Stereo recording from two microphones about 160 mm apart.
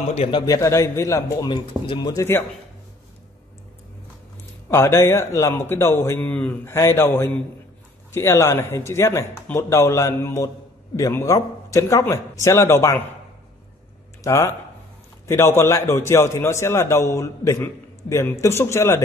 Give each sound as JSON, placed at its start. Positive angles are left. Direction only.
{"t": 0.1, "sound": "a man's voice", "side_deg": 40}
{"t": 0.5, "sound": "a man's voice", "side_deg": 20}
{"t": 4.6, "sound": "a man's voice", "side_deg": 15}
{"t": 14.2, "sound": "a man's voice", "side_deg": 20}